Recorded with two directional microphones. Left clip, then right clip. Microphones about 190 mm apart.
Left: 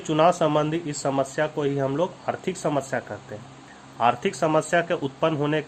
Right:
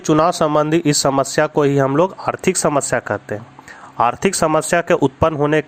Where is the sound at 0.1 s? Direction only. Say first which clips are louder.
Right 5 dB; 30° right (ahead or behind).